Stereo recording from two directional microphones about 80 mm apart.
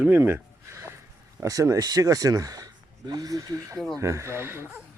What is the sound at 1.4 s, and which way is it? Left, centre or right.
Speech, right.